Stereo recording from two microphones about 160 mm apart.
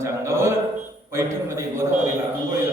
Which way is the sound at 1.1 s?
15° right (ahead or behind).